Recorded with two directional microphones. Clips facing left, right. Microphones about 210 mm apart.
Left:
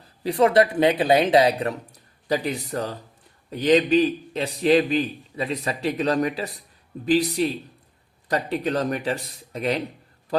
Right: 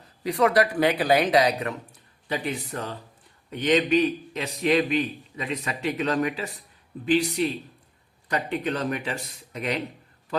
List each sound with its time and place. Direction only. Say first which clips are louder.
0.2 s a man's voice: left 3 dB; 30° left (ahead or behind)